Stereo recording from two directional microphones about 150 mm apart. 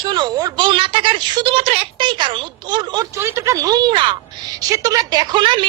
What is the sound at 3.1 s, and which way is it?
A woman's voice, 20° right (ahead or behind).